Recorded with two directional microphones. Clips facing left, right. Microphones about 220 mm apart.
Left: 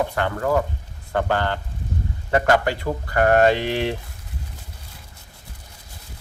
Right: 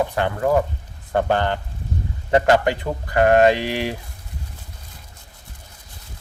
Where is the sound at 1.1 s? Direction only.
20° right (ahead or behind).